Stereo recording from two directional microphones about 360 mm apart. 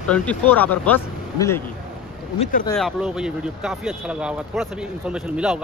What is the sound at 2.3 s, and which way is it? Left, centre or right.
Speech, centre.